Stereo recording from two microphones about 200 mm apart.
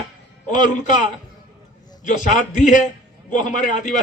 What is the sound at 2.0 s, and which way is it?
A man's voice, 40° left (ahead or behind).